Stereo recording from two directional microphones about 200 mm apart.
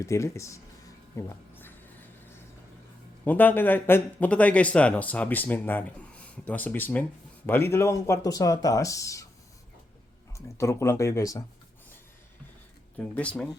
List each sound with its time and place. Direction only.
0.0 s speech: 15° left (ahead or behind)
1.1 s music: 10° left (ahead or behind)
3.2 s speech: 10° left (ahead or behind)
10.3 s speech: 15° left (ahead or behind)
13.0 s speech: 5° left (ahead or behind)